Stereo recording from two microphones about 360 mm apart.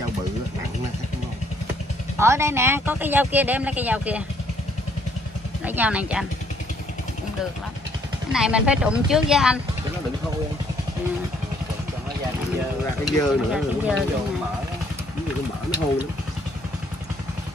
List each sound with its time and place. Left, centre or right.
2.1 s speech: centre
5.7 s speech: centre
8.3 s speech: centre
13.0 s speech: centre